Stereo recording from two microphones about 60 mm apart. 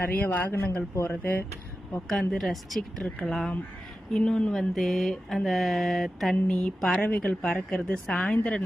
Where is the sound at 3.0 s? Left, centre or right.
Centre.